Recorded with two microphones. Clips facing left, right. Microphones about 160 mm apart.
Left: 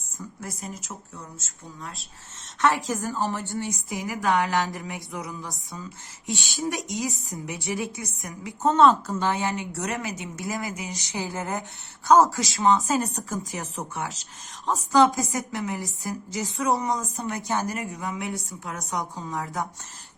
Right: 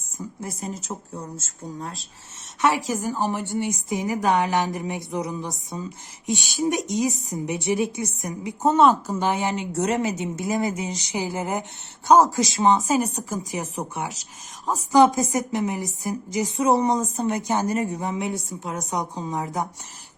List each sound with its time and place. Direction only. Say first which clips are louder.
0.2 s speech: right 4 dB; 25° right (ahead or behind)
2.6 s a woman's voice: right 1 dB; 15° right (ahead or behind)